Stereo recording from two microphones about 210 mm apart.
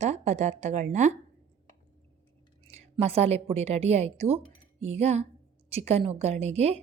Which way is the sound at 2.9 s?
30° right (ahead or behind).